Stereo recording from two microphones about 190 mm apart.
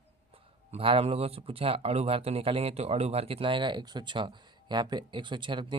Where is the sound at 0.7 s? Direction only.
30° right (ahead or behind).